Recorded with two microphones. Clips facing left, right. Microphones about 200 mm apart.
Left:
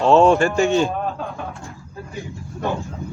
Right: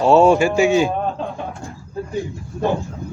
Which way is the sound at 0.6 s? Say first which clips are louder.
Right 2 dB; centre (ahead or behind).